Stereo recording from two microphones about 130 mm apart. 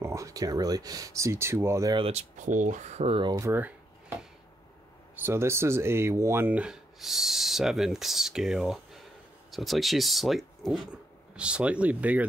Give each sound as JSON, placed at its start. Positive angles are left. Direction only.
{"t": 0.0, "sound": "speech", "side_deg": -25}
{"t": 2.0, "sound": "speech", "side_deg": -50}
{"t": 2.3, "sound": "speech", "side_deg": -70}
{"t": 3.3, "sound": "speech", "side_deg": -25}
{"t": 5.1, "sound": "speech", "side_deg": -15}